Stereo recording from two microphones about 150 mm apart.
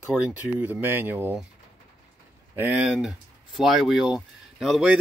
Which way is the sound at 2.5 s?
15° right (ahead or behind).